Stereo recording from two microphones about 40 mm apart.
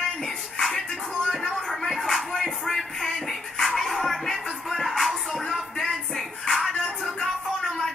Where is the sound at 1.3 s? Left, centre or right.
Centre.